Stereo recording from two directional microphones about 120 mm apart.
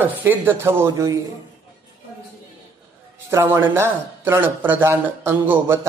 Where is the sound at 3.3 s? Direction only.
20° right (ahead or behind).